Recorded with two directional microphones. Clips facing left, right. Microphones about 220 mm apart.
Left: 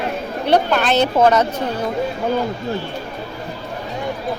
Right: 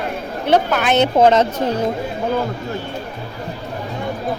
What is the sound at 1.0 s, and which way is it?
Speech, 25° right (ahead or behind).